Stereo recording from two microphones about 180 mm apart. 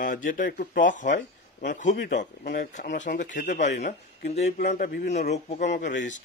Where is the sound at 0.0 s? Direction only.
50° left (ahead or behind).